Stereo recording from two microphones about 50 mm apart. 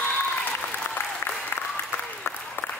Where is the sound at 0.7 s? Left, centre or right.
Left.